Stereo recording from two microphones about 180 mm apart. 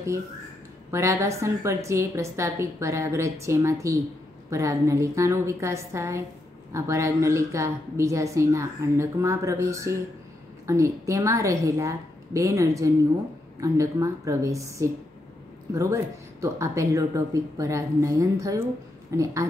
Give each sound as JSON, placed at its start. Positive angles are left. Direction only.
{"t": 0.9, "sound": "speech", "side_deg": -15}